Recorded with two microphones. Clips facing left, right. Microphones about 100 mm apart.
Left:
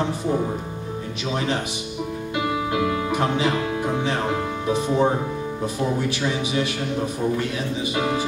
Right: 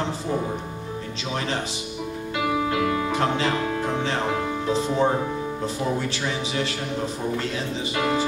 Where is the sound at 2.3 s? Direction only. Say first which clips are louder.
Even; 10° left (ahead or behind).